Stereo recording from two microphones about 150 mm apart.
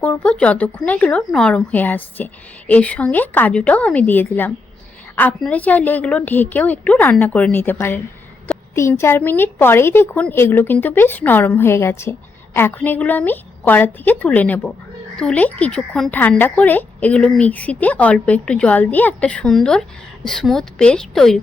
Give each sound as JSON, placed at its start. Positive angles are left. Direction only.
{"t": 0.0, "sound": "a woman's voice", "side_deg": 10}